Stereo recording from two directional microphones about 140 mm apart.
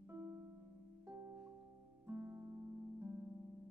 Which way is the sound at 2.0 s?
15° right (ahead or behind).